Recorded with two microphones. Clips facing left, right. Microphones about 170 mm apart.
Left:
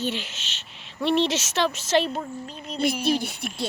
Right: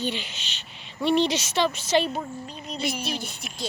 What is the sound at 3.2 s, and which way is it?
Speech, 60° left (ahead or behind).